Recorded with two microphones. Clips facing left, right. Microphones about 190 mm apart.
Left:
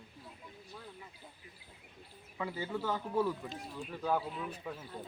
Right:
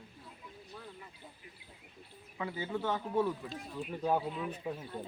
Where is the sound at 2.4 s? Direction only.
10° right (ahead or behind).